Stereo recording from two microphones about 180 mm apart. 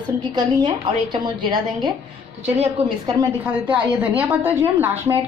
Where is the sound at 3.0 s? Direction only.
15° right (ahead or behind).